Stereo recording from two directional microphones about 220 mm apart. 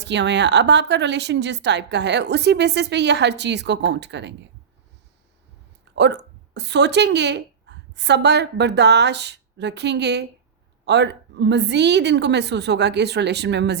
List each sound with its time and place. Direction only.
0.0 s a woman's voice: 50° right (ahead or behind)
5.9 s a woman's voice: 50° right (ahead or behind)